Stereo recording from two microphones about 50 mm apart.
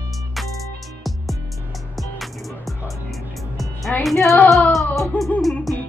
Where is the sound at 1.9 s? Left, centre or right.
Centre.